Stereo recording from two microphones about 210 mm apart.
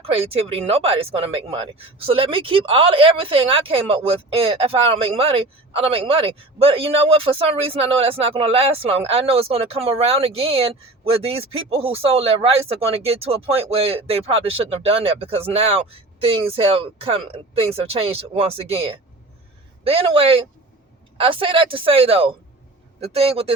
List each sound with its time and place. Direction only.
0.0 s speech: 25° right (ahead or behind)